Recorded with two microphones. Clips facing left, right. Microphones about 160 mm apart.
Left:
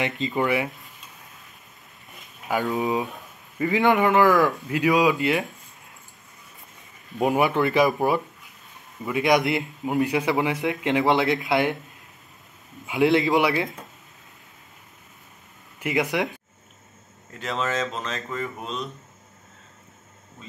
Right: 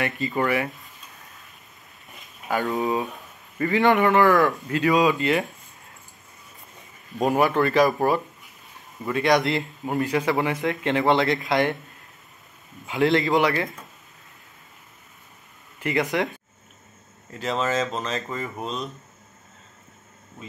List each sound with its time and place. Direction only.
0.0 s a man's voice: 20° left (ahead or behind)
2.6 s speech: centre (ahead or behind)
3.9 s a man's voice: 10° left (ahead or behind)
7.2 s speech: 5° left (ahead or behind)
7.4 s a man's voice: 15° left (ahead or behind)
12.8 s a man's voice: 15° left (ahead or behind)
15.8 s a man's voice: 15° left (ahead or behind)
17.3 s speech: centre (ahead or behind)